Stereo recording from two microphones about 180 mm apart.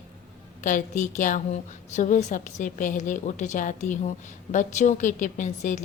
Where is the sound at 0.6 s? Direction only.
45° left (ahead or behind).